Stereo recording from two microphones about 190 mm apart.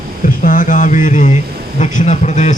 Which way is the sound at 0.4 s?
45° left (ahead or behind).